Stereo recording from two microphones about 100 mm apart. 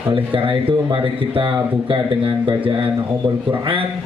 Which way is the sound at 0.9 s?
60° right (ahead or behind).